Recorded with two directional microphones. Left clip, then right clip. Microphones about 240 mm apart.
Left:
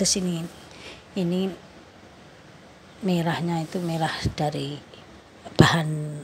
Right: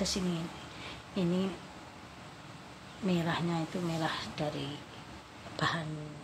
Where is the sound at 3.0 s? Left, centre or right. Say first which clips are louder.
Left 7 dB; left.